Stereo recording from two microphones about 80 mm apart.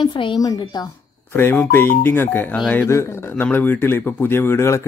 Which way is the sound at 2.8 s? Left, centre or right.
Left.